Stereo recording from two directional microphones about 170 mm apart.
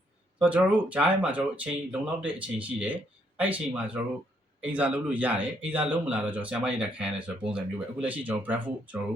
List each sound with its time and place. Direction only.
0.3 s speech: 5° right (ahead or behind)